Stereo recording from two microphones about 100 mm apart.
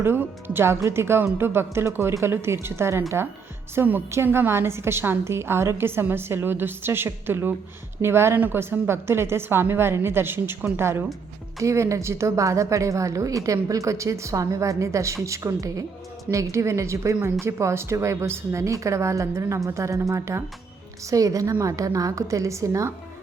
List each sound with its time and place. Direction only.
0.0 s a woman's voice: 25° right (ahead or behind)